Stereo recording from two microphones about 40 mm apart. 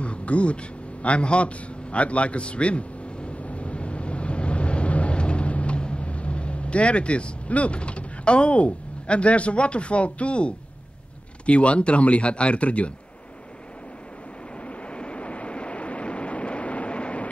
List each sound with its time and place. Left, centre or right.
0.0 s a sound: left
11.4 s speech: left
14.9 s vehicle: left